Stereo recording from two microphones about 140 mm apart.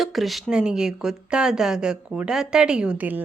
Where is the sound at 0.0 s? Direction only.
Centre (ahead or behind).